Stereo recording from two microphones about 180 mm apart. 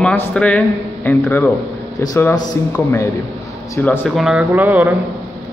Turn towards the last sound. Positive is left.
turn(degrees=-10)  # may be behind; listen again after turning